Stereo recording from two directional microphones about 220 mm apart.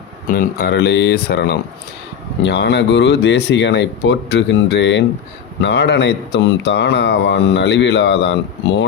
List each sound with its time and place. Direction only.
0.3 s speech: 50° left (ahead or behind)